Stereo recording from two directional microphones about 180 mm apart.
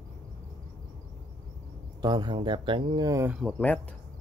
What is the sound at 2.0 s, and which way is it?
Speech, 25° right (ahead or behind).